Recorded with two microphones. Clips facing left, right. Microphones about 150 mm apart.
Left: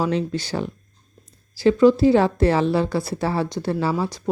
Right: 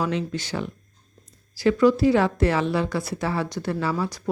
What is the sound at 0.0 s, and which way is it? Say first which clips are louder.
A woman's voice: left 3 dB; 35° left (ahead or behind).